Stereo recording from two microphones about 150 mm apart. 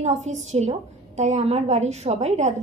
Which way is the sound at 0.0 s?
50° right (ahead or behind).